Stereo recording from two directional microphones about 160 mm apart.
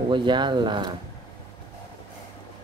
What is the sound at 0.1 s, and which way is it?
Speech, 30° right (ahead or behind).